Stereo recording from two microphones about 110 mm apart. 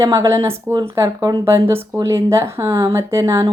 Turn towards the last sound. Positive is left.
turn(degrees=-30)  # may be behind; listen again after turning